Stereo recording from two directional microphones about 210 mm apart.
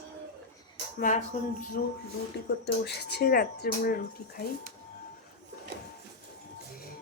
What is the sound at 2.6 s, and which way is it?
Speech, 50° left (ahead or behind).